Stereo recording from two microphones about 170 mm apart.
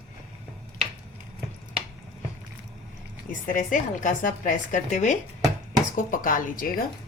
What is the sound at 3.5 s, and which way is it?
A woman's voice, 50° left (ahead or behind).